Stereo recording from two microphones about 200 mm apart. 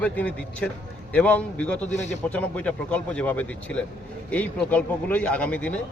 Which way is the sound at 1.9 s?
35° left (ahead or behind).